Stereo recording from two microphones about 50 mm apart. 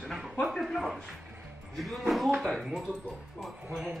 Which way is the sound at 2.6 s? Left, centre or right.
Centre.